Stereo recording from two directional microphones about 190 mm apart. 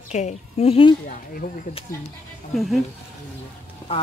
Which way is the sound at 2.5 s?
Centre (ahead or behind).